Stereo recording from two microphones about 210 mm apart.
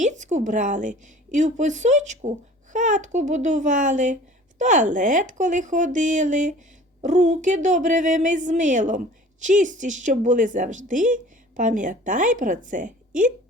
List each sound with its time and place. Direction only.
0.0 s a woman's voice: 35° right (ahead or behind)